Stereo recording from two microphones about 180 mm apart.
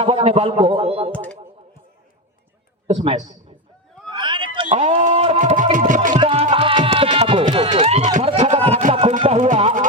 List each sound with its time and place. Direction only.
0.0 s a man's voice: 30° right (ahead or behind)
1.1 s speech: 5° left (ahead or behind)
2.8 s a man's voice: 35° right (ahead or behind)
4.1 s a sound: 25° right (ahead or behind); by 6.1 s 45° right (ahead or behind)
6.1 s music: 30° right (ahead or behind)
7.5 s run: 30° right (ahead or behind)
9.1 s music: 30° right (ahead or behind)
9.4 s a sound: 40° right (ahead or behind)